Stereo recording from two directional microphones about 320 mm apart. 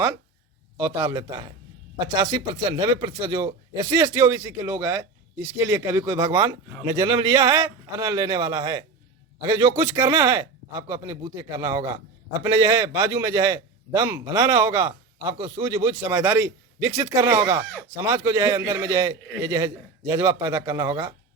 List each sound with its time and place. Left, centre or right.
0.8 s a man's voice: centre